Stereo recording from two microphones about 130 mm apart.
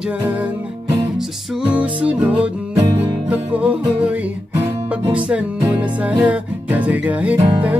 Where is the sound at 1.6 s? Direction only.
10° right (ahead or behind).